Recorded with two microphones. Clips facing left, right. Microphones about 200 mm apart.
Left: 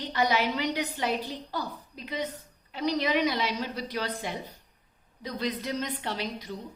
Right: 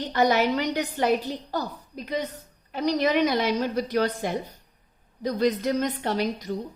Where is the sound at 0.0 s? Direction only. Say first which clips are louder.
Right 5 dB; 45° right (ahead or behind).